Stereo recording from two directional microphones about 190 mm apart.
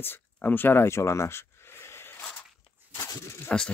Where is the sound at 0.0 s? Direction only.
10° left (ahead or behind).